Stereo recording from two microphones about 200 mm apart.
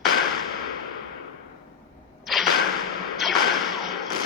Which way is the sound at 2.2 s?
Centre (ahead or behind).